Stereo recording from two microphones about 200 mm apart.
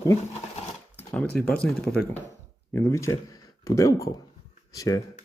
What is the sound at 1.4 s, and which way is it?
Speech, 5° left (ahead or behind).